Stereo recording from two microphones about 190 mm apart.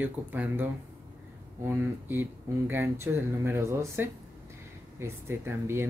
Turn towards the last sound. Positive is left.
turn(degrees=-10)  # may be behind; listen again after turning